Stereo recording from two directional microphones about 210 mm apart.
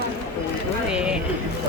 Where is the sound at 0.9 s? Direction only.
5° right (ahead or behind).